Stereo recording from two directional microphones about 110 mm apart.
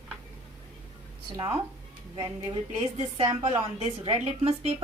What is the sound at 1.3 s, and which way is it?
Speech, 30° right (ahead or behind).